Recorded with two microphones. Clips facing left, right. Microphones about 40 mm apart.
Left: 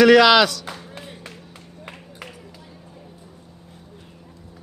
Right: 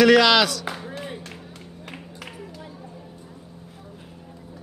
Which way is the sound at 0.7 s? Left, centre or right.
Centre.